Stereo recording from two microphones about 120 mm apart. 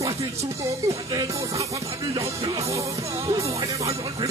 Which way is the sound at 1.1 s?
25° right (ahead or behind).